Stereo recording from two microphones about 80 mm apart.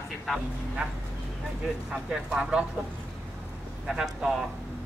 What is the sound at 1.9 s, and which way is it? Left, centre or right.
Speech, centre.